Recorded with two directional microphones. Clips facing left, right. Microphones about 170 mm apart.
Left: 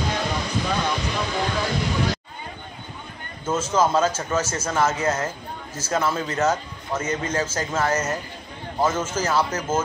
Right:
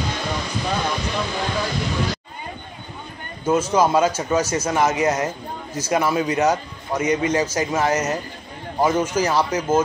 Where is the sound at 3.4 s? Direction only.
15° right (ahead or behind).